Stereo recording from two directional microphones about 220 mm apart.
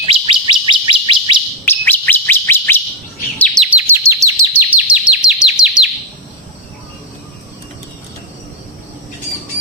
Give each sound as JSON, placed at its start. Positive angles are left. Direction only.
{"t": 0.1, "sound": "bird", "side_deg": -20}
{"t": 1.6, "sound": "bird", "side_deg": 10}
{"t": 3.3, "sound": "chirp", "side_deg": 5}
{"t": 3.7, "sound": "chirp", "side_deg": -10}